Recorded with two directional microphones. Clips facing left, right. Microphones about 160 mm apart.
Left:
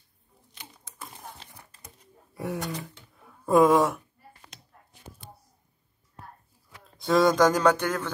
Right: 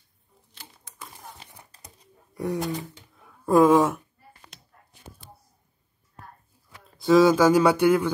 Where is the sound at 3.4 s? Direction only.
Centre (ahead or behind).